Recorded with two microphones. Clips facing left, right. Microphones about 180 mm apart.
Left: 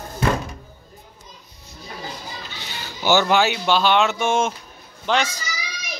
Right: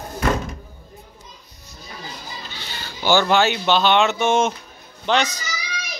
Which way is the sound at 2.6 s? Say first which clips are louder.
Even; 15° left (ahead or behind).